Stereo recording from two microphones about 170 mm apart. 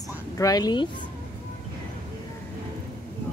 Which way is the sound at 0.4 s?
20° left (ahead or behind).